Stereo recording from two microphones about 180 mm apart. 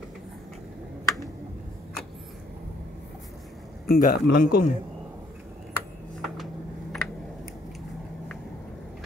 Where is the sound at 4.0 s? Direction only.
60° left (ahead or behind).